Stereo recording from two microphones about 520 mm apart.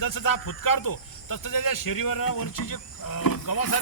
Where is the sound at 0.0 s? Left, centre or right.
Left.